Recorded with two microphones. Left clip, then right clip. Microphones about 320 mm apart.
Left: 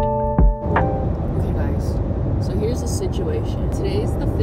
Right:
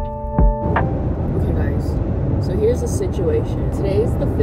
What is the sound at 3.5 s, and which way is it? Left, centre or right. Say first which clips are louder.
Speech: right 3 dB; right.